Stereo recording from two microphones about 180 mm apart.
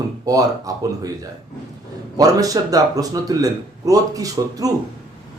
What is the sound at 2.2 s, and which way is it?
A man's voice, 20° right (ahead or behind).